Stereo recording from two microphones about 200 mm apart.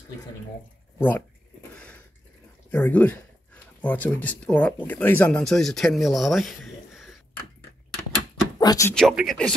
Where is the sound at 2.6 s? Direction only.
10° left (ahead or behind).